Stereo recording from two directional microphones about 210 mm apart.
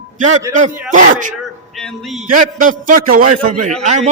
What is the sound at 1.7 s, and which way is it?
Speech, centre (ahead or behind).